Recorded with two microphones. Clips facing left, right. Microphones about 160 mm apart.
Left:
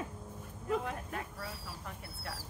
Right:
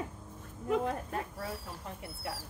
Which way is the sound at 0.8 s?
30° right (ahead or behind).